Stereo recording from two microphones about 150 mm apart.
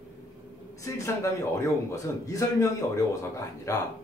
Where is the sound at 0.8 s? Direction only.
20° left (ahead or behind).